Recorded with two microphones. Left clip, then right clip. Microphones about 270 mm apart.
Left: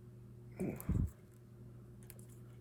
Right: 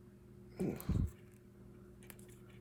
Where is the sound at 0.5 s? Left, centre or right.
Centre.